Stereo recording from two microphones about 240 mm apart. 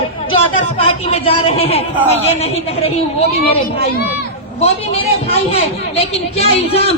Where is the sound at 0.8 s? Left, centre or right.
Left.